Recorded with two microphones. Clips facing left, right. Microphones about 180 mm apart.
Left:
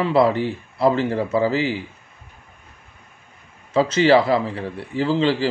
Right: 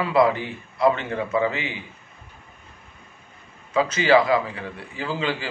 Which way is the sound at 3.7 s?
30° left (ahead or behind).